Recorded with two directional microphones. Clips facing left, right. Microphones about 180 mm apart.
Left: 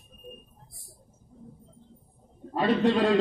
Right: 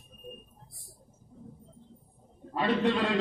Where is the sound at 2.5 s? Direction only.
40° left (ahead or behind).